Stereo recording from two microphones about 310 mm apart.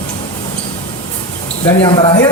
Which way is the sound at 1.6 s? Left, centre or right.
Centre.